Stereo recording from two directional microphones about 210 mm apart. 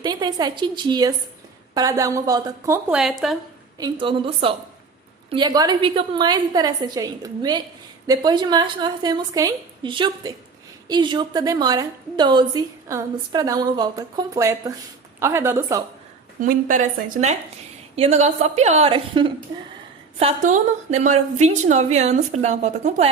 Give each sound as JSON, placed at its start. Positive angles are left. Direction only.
{"t": 0.0, "sound": "a woman's voice", "side_deg": -20}
{"t": 3.8, "sound": "a woman's voice", "side_deg": -20}
{"t": 16.4, "sound": "a woman's voice", "side_deg": -40}